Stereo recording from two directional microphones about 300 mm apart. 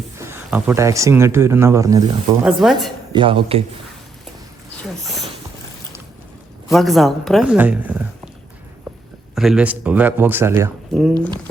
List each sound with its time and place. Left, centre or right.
0.2 s speech: centre
3.1 s speech: centre
6.7 s speech: centre
9.3 s speech: centre